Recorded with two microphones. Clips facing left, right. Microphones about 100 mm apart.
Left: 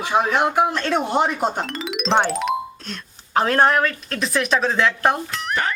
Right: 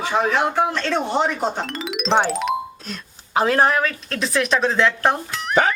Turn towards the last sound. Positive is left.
turn(degrees=0)  # may be behind; listen again after turning